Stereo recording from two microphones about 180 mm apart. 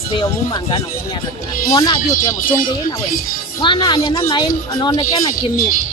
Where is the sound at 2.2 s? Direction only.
15° left (ahead or behind).